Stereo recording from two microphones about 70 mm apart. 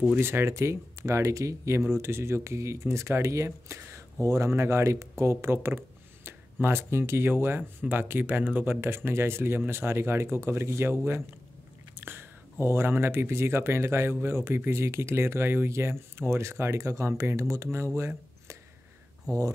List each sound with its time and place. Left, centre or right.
0.2 s speech: right
1.9 s speech: right
17.9 s a sound: right